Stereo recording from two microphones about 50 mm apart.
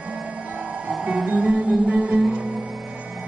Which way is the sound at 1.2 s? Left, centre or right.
Right.